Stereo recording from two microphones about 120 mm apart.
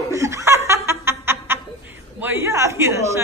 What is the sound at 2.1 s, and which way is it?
Speech, 20° right (ahead or behind).